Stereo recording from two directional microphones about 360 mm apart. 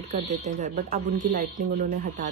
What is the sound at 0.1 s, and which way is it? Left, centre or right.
Speech, centre.